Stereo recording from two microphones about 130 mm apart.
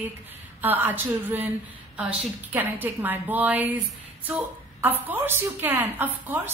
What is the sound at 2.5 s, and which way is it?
A woman's voice, 15° right (ahead or behind).